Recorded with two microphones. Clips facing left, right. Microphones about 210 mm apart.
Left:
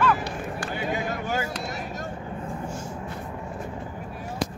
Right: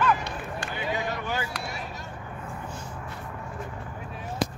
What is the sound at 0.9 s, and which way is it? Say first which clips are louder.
Vehicle: left 1 dB; 45° left (ahead or behind).